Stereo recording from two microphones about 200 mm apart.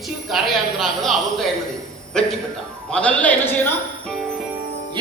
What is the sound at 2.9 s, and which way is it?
Speech, 5° left (ahead or behind).